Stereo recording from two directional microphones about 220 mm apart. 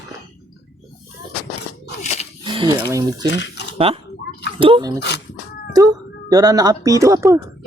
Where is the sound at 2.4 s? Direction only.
20° right (ahead or behind).